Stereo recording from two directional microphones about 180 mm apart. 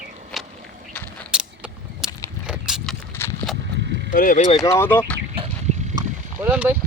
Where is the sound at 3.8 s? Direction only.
75° right (ahead or behind).